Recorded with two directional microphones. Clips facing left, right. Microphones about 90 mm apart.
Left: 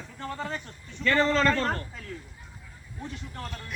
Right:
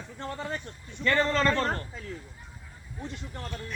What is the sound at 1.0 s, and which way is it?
Speech, 30° right (ahead or behind).